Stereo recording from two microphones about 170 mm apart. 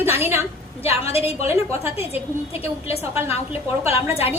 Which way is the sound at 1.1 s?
35° left (ahead or behind).